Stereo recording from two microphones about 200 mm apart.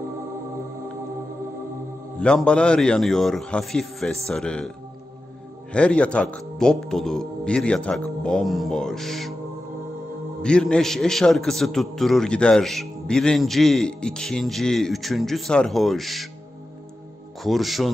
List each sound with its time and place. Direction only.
2.1 s a man's voice: 5° left (ahead or behind)
10.4 s a man's voice: 5° left (ahead or behind)
17.4 s a man's voice: centre (ahead or behind)